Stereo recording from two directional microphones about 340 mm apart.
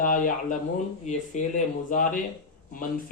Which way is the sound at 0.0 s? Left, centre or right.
Left.